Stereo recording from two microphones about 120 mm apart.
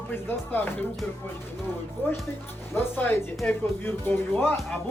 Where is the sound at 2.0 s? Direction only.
20° left (ahead or behind).